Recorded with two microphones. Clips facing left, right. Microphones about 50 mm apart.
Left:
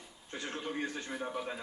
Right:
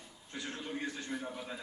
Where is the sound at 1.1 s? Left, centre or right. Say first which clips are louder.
Left 3 dB; centre.